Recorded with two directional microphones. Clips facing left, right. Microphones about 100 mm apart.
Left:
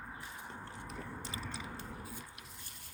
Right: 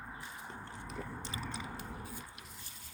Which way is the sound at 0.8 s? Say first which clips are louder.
Right 3 dB; centre (ahead or behind).